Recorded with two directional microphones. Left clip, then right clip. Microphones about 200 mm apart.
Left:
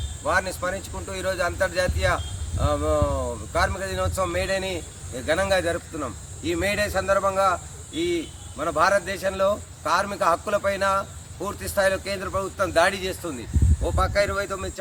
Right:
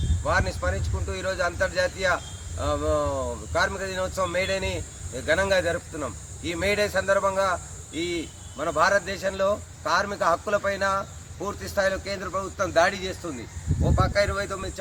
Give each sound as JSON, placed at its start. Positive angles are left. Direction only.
{"t": 0.3, "sound": "a man's voice", "side_deg": 0}